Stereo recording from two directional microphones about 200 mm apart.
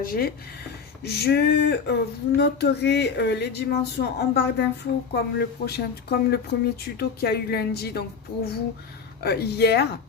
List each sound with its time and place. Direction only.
0.0 s speech: 45° left (ahead or behind)
1.0 s male singing: 55° left (ahead or behind)
2.4 s speech: 55° left (ahead or behind)
9.2 s male singing: 50° left (ahead or behind)